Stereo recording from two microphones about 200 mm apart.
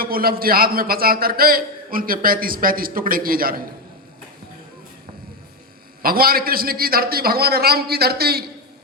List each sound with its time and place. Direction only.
0.0 s a man's voice: 45° right (ahead or behind)
6.0 s a man's voice: 50° right (ahead or behind)